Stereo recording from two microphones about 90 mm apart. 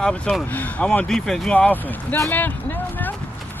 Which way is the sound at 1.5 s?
15° left (ahead or behind).